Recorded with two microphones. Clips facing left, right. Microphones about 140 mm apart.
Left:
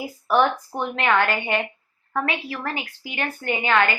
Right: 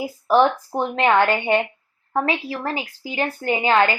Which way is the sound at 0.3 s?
30° right (ahead or behind).